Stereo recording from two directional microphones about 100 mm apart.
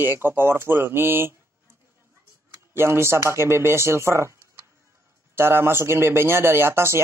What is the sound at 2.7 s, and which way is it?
Speech, 25° right (ahead or behind).